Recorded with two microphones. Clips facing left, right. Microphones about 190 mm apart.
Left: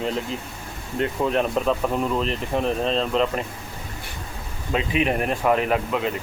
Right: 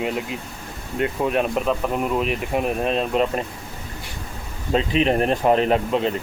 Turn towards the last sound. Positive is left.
turn(degrees=-30)  # may be behind; listen again after turning